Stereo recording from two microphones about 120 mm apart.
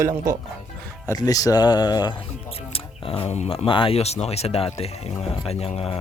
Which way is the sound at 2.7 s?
50° left (ahead or behind).